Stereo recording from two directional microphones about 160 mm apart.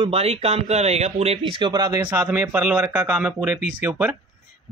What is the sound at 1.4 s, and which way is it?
Speech, 30° right (ahead or behind).